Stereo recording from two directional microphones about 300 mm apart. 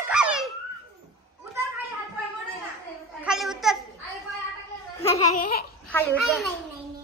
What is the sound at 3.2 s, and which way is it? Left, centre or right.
Babbling, centre.